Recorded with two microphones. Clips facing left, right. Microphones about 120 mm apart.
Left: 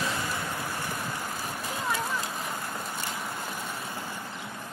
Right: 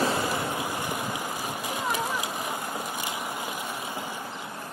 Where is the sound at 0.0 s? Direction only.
35° right (ahead or behind).